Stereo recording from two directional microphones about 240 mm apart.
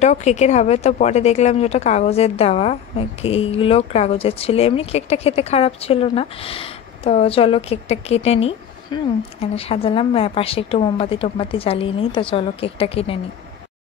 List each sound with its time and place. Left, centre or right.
0.0 s a woman's voice: left